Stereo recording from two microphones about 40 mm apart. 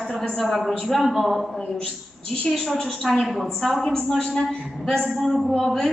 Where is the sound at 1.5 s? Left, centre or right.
Centre.